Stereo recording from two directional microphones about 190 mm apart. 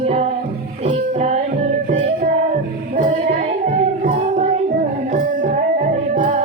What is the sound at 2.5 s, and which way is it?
Music, 40° right (ahead or behind).